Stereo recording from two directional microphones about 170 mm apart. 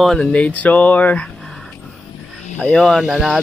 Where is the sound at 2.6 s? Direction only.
5° left (ahead or behind).